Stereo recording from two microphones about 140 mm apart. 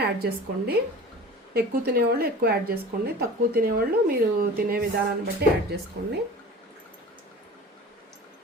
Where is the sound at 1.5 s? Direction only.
90° right.